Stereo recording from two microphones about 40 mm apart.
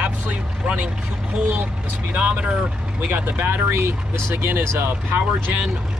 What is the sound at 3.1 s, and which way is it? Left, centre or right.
Speech, right.